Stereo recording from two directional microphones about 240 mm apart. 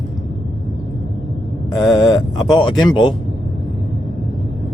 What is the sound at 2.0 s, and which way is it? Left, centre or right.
Speech, centre.